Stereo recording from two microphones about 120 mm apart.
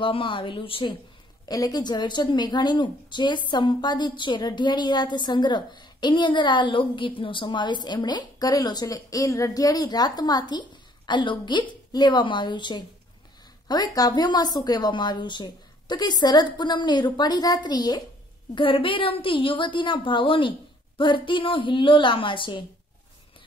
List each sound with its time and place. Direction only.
0.0 s a woman's voice: 45° left (ahead or behind)
1.4 s a woman's voice: 30° left (ahead or behind)
18.5 s a woman's voice: 45° left (ahead or behind)